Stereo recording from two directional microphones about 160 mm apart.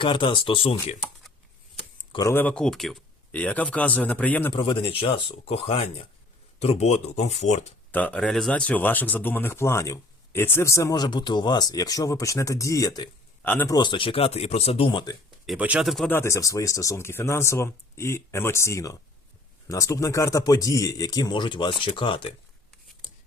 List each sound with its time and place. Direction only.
0.0 s speech: 30° left (ahead or behind)
2.1 s speech: 15° left (ahead or behind)
4.5 s speech: 30° left (ahead or behind); by 7.7 s 45° left (ahead or behind)
7.9 s speech: 10° left (ahead or behind)
13.4 s a man's voice: 10° left (ahead or behind)
13.7 s speech: 30° left (ahead or behind)
15.4 s speech: 10° right (ahead or behind)
16.0 s speech: 15° left (ahead or behind); by 22.3 s 30° left (ahead or behind)